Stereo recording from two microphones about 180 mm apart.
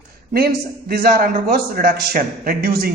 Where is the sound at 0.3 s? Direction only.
60° right (ahead or behind).